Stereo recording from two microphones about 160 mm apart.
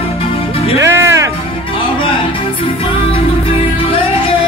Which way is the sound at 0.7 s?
15° right (ahead or behind).